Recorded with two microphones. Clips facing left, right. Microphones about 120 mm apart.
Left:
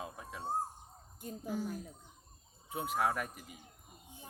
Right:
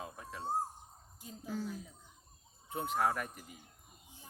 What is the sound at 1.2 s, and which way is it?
Speech, 50° left (ahead or behind).